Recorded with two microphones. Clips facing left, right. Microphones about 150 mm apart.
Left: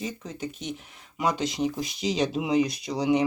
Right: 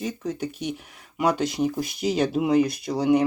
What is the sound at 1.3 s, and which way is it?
Speech, 60° right (ahead or behind).